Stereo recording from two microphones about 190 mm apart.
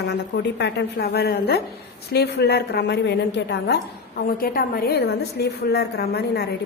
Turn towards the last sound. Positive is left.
turn(degrees=60)  # may be behind; listen again after turning